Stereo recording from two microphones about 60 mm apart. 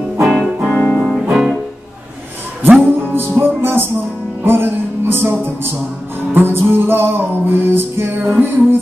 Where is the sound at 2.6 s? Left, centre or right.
Right.